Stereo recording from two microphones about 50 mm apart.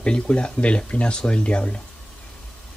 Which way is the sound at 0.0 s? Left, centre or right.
Left.